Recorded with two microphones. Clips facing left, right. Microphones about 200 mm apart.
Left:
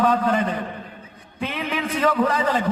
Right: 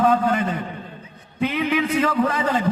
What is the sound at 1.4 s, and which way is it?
Speech, 30° left (ahead or behind).